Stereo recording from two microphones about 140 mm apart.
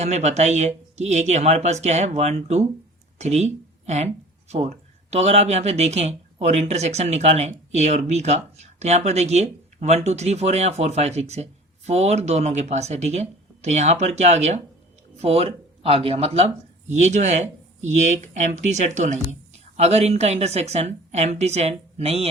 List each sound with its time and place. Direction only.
0.0 s a woman's voice: 50° right (ahead or behind)